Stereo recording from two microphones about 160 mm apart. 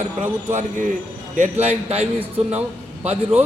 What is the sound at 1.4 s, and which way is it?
A man's voice, 40° right (ahead or behind).